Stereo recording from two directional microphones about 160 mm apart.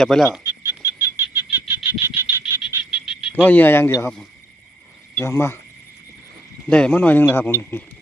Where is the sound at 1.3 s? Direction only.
10° right (ahead or behind).